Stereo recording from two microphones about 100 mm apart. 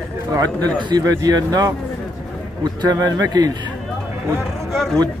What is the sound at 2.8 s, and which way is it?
Speech, 40° right (ahead or behind).